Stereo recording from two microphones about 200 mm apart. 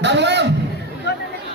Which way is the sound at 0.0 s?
60° right (ahead or behind).